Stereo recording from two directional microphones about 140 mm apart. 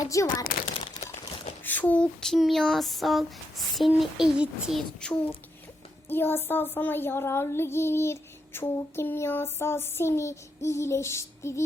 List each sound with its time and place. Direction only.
0.0 s speech: 25° left (ahead or behind)
1.6 s a sound: 15° left (ahead or behind)
6.1 s child singing: 15° left (ahead or behind)